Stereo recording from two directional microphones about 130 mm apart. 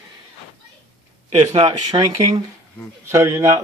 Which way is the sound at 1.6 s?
30° right (ahead or behind).